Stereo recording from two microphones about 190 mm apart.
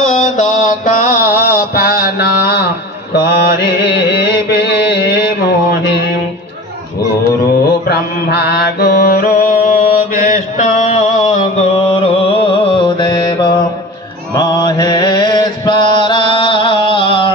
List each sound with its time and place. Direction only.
0.0 s mantra: 40° left (ahead or behind); by 5.2 s 60° left (ahead or behind)
7.9 s mantra: 60° left (ahead or behind); by 17.3 s 25° left (ahead or behind)